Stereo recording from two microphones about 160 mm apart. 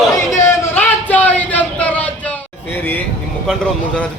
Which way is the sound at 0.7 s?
10° left (ahead or behind).